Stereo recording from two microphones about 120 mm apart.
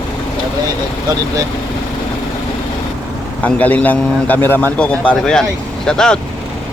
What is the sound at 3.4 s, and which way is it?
A man's voice, 10° left (ahead or behind).